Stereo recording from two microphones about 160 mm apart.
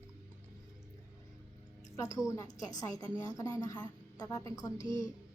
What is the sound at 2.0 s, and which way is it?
A woman's voice, 20° left (ahead or behind).